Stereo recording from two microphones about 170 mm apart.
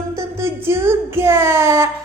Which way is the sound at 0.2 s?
15° right (ahead or behind).